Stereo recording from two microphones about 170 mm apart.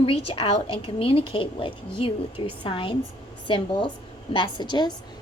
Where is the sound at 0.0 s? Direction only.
35° left (ahead or behind).